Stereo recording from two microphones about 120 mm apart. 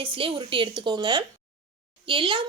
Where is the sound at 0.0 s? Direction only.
45° right (ahead or behind).